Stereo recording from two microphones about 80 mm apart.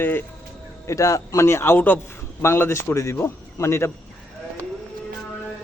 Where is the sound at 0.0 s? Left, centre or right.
Left.